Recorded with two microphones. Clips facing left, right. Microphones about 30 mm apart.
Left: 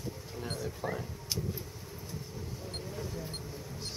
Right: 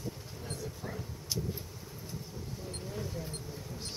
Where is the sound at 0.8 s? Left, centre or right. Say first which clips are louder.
Left 8 dB; left.